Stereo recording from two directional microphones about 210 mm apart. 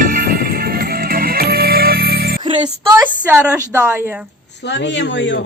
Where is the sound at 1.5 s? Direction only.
45° right (ahead or behind).